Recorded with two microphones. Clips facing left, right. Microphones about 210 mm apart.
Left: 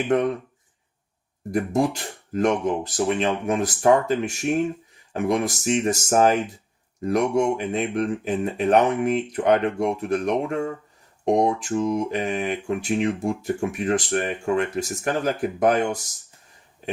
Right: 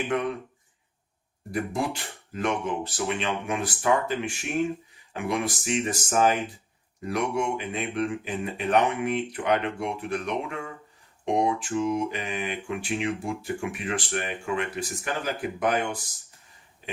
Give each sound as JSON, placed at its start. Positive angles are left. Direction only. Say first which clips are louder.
{"t": 0.1, "sound": "speech", "louder": "left 7 dB", "side_deg": 45}
{"t": 1.5, "sound": "speech", "louder": "left 6 dB", "side_deg": 45}